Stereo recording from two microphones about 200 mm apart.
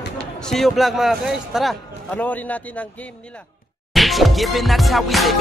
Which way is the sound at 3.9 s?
Centre (ahead or behind).